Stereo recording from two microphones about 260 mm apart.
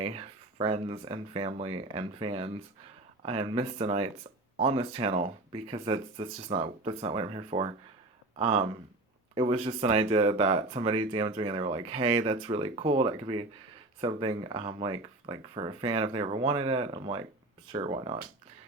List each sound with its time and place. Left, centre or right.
0.0 s speech: right